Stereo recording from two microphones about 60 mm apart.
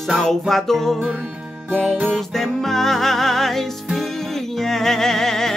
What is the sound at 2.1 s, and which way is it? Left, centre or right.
Music, centre.